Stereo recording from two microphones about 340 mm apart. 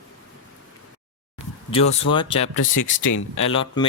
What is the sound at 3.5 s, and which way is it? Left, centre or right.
Speech, centre.